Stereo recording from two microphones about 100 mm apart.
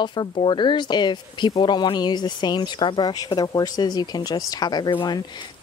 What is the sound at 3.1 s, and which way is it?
Speech, 40° left (ahead or behind).